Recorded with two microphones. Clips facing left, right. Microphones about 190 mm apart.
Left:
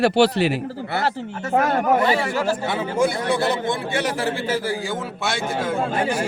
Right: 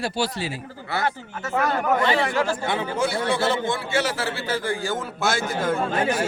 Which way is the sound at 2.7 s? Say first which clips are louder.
Left 2 dB; 5° left (ahead or behind).